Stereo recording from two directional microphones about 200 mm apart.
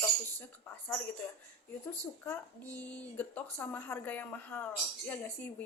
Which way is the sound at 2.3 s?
10° left (ahead or behind).